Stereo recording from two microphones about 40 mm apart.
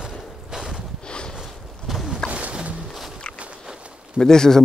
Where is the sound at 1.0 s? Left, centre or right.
Left.